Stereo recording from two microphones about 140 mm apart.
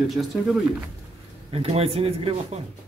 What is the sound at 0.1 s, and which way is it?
Speech, centre (ahead or behind).